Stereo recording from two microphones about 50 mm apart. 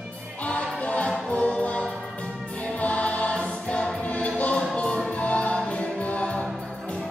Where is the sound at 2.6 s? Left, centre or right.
Left.